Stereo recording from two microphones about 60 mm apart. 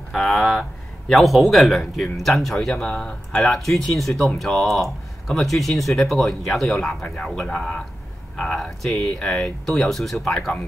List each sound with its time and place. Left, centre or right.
0.1 s speech: centre
3.4 s speech: centre